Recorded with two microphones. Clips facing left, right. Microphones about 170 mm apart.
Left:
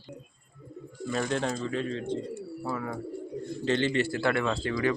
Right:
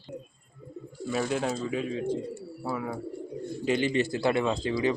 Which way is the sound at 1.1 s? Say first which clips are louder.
Right 1 dB; 5° right (ahead or behind).